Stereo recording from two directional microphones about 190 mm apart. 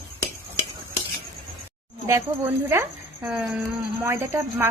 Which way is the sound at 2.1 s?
15° right (ahead or behind).